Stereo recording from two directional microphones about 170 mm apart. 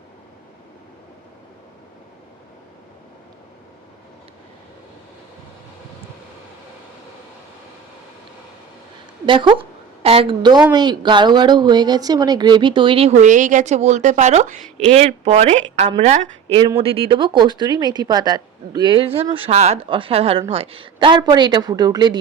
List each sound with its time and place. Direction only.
9.2 s a woman's voice: 30° right (ahead or behind)